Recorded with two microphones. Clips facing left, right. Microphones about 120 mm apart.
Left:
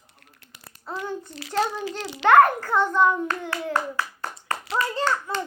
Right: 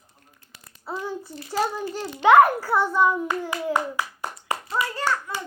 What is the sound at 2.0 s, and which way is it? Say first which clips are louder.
Speech: right 2 dB; 90° left.